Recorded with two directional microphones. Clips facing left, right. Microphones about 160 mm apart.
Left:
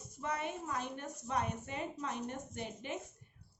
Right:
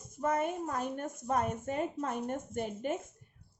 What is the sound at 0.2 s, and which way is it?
A woman's voice, 45° right (ahead or behind).